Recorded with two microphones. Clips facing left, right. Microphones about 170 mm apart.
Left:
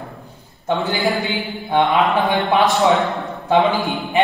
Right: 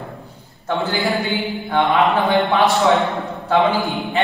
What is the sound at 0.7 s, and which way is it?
A man's voice, 20° left (ahead or behind).